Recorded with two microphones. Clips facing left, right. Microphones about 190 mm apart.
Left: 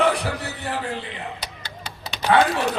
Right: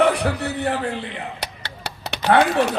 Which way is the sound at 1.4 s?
70° right (ahead or behind).